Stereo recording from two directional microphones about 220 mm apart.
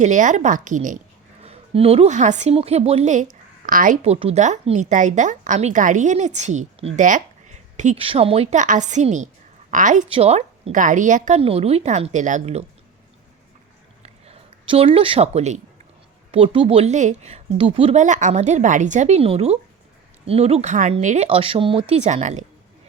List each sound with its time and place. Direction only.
0.0 s a woman's voice: 35° right (ahead or behind)
14.0 s a sound: 25° right (ahead or behind)
16.3 s a woman's voice: 25° right (ahead or behind)